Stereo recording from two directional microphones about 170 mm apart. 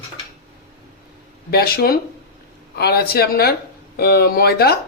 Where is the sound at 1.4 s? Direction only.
65° left (ahead or behind).